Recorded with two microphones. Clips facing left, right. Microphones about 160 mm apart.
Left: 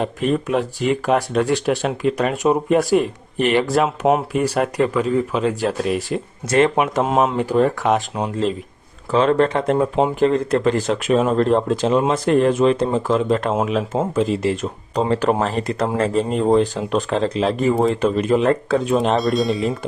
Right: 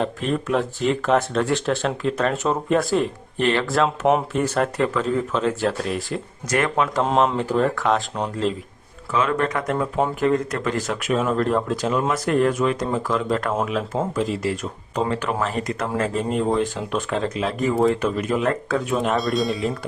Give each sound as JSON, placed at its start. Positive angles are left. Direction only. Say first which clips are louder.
{"t": 0.0, "sound": "speech", "louder": "left 3 dB", "side_deg": 15}
{"t": 3.8, "sound": "speech", "louder": "left 2 dB", "side_deg": 5}
{"t": 9.1, "sound": "speech", "louder": "left 6 dB", "side_deg": 30}
{"t": 19.2, "sound": "speech", "louder": "left 4 dB", "side_deg": 0}